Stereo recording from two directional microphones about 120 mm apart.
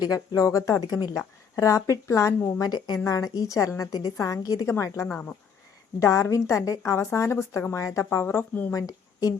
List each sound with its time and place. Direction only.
0.0 s a woman's voice: 30° left (ahead or behind)
8.7 s speech: 30° left (ahead or behind)